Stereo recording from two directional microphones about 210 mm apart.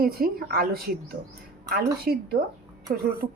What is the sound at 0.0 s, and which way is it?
Speech, 45° right (ahead or behind).